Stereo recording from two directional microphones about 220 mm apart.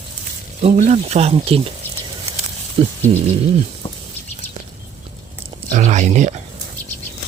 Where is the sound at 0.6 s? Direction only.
30° right (ahead or behind).